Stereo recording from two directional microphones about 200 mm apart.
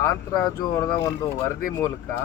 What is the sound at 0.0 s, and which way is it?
Speech, 15° left (ahead or behind).